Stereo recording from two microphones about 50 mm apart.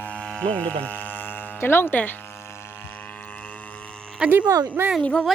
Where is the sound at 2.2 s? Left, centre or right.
Left.